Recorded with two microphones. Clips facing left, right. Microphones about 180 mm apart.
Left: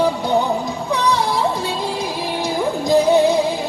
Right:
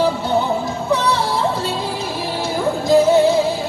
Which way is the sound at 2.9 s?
15° left (ahead or behind).